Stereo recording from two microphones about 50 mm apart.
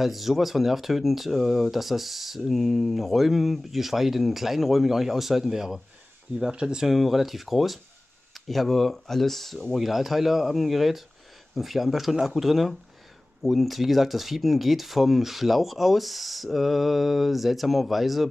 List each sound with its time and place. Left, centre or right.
0.0 s speech: centre
6.9 s speech: centre